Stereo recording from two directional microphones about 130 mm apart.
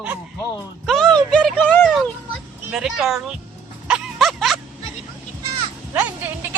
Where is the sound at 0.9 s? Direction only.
5° left (ahead or behind).